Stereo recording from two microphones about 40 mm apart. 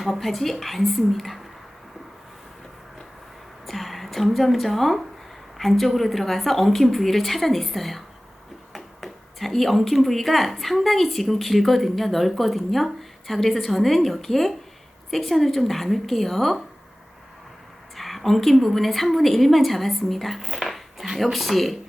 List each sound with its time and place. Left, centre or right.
0.0 s speech: centre
3.7 s a woman's voice: centre
17.9 s a sound: centre
18.6 s a woman's voice: centre